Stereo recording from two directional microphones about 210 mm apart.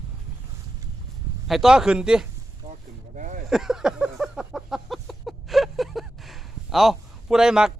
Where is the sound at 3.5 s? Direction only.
Centre (ahead or behind).